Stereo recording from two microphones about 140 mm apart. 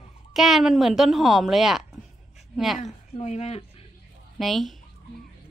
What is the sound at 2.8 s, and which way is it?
Speech, 55° left (ahead or behind).